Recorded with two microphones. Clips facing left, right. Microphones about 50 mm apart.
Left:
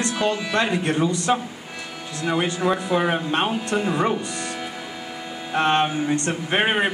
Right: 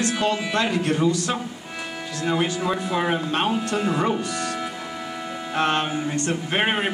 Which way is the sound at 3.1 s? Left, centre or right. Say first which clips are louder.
Left 1 dB; left.